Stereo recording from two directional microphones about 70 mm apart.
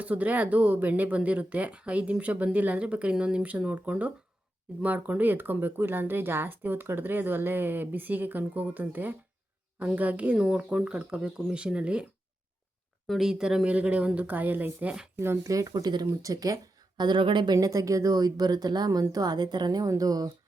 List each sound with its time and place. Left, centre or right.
0.0 s speech: right
10.3 s speech: centre
13.1 s speech: centre; by 14.9 s right
15.4 s speech: right
16.2 s speech: right
17.0 s speech: right
17.7 s speech: right
19.9 s speech: right